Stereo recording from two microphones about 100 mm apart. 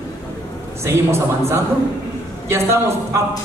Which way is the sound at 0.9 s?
25° right (ahead or behind).